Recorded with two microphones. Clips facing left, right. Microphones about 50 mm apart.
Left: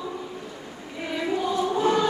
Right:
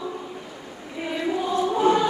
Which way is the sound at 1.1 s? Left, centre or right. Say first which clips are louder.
Right 1 dB; centre.